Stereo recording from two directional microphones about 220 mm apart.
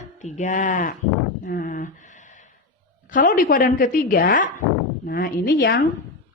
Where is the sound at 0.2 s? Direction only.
30° left (ahead or behind).